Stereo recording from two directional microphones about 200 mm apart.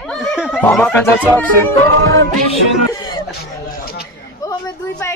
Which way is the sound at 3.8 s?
50° left (ahead or behind).